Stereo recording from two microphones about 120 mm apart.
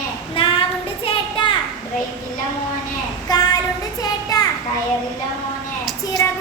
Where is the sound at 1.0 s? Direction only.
45° left (ahead or behind).